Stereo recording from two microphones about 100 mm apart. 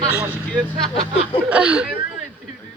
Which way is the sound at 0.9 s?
70° left (ahead or behind).